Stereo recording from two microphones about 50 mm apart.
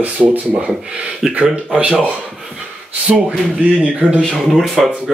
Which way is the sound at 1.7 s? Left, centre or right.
Right.